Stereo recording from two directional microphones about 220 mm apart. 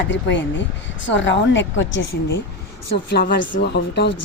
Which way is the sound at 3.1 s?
45° left (ahead or behind).